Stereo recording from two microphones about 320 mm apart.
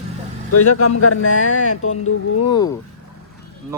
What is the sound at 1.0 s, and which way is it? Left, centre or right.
Speech, left.